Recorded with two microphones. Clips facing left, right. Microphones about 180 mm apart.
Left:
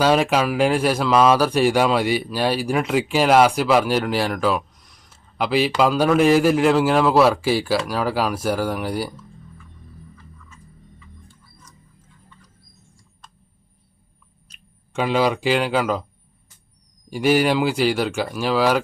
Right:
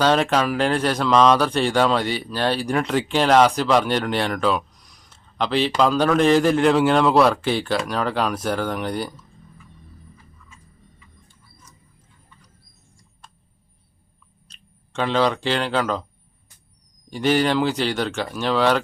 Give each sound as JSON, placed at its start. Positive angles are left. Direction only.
{"t": 0.0, "sound": "speech", "side_deg": 10}
{"t": 14.4, "sound": "speech", "side_deg": 10}
{"t": 17.1, "sound": "speech", "side_deg": 10}